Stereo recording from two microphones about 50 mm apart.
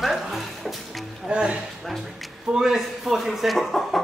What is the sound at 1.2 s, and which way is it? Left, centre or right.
Speech, right.